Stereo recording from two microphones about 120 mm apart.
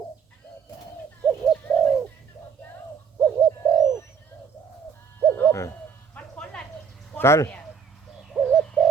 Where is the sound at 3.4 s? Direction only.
35° right (ahead or behind).